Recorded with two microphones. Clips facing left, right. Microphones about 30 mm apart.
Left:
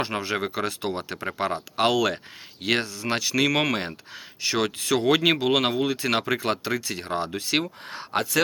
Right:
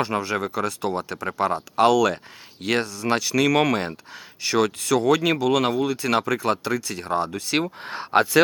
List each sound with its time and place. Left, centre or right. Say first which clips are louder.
0.0 s speech: right 3 dB; centre
5.0 s speech: even; left
7.6 s speech: right 4 dB; right